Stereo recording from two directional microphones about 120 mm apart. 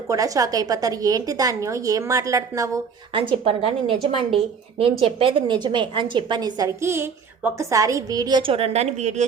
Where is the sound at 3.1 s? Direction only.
50° right (ahead or behind); by 9.2 s 70° right (ahead or behind).